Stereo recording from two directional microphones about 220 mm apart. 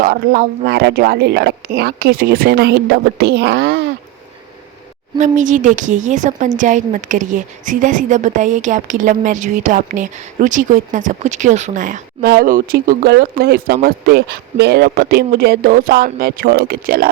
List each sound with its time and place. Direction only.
0.0 s speech: 40° right (ahead or behind)
5.1 s a woman's voice: 35° right (ahead or behind)